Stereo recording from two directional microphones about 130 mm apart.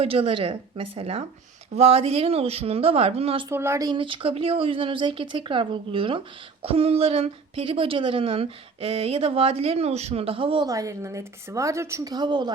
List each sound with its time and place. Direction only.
0.0 s speech: 45° right (ahead or behind)
3.5 s a woman's voice: 20° right (ahead or behind)
3.9 s speech: 40° right (ahead or behind)
10.7 s a woman's voice: 25° right (ahead or behind)